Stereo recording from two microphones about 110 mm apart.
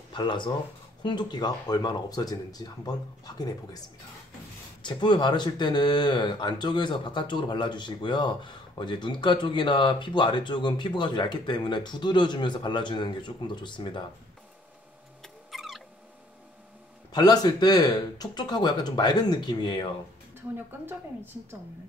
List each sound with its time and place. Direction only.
0.1 s speech: 45° left (ahead or behind)
4.8 s speech: 45° left (ahead or behind)
15.2 s cat: centre (ahead or behind)
17.1 s speech: 35° left (ahead or behind)
20.5 s a woman's voice: 20° right (ahead or behind)